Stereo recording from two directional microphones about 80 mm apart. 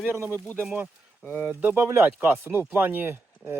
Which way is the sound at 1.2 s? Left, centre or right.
Left.